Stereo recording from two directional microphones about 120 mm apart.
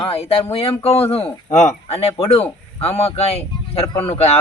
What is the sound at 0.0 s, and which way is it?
Speech, 55° left (ahead or behind).